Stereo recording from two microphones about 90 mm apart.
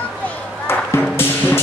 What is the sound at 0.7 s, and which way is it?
Music, 25° left (ahead or behind).